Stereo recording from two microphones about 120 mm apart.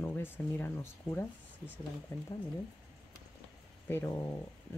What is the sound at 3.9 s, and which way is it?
Speech, 20° left (ahead or behind).